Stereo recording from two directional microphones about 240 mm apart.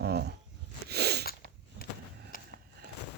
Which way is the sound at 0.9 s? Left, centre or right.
Right.